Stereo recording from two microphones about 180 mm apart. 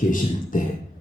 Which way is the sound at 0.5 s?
45° left (ahead or behind).